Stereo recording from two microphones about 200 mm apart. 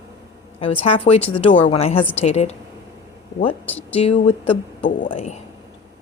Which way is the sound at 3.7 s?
30° left (ahead or behind).